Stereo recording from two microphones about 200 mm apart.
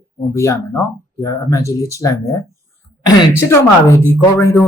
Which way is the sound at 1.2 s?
15° left (ahead or behind).